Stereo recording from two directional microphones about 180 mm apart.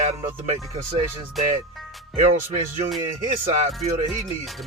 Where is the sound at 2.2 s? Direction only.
35° right (ahead or behind).